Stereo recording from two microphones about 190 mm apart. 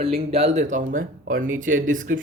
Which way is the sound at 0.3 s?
35° right (ahead or behind).